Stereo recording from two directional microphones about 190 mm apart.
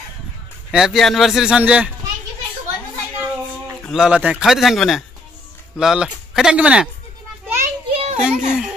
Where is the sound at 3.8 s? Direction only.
5° right (ahead or behind).